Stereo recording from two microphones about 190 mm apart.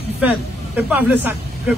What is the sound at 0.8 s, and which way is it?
Speech, 10° right (ahead or behind).